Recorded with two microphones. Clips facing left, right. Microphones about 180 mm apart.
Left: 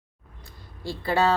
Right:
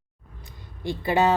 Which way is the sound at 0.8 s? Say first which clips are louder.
Right 2 dB; 20° right (ahead or behind).